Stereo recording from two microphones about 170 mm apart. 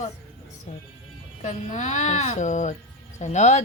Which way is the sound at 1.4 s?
45° left (ahead or behind).